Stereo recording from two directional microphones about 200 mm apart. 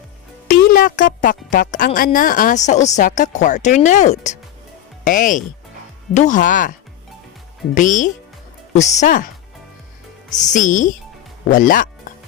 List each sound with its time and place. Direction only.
0.4 s a woman's voice: 45° left (ahead or behind)
7.8 s a woman's voice: 40° left (ahead or behind)
10.3 s a woman's voice: 40° left (ahead or behind)